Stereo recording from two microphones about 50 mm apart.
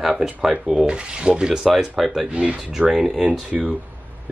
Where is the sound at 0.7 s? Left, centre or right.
Right; by 2.2 s centre.